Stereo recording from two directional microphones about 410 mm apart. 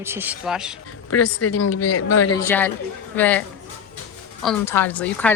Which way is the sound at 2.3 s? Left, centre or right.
Centre.